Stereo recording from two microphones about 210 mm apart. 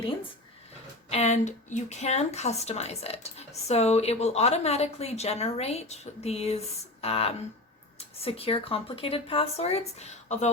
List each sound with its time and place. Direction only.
1.1 s speech: 35° left (ahead or behind)